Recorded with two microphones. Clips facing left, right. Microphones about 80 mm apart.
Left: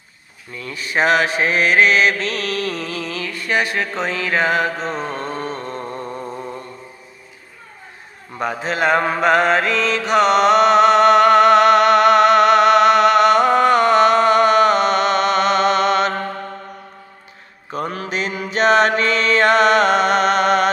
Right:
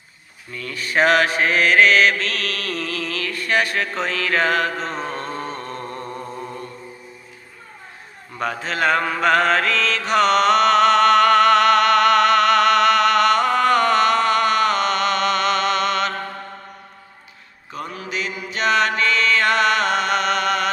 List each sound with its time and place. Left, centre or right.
0.5 s mantra: centre
8.4 s mantra: centre
17.7 s mantra: left
18.5 s music: left